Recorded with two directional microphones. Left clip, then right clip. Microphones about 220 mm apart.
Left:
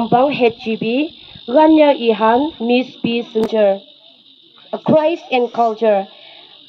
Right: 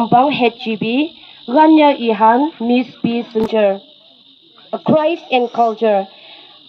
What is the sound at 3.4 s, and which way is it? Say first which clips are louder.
Speech: even; 10° left (ahead or behind).